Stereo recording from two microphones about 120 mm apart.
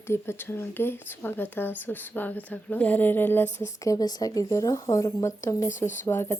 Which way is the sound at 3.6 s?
30° left (ahead or behind).